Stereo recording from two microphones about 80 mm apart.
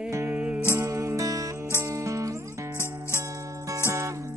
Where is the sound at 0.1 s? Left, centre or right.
Right.